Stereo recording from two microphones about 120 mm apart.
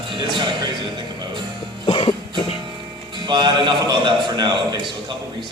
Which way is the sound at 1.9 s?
40° left (ahead or behind).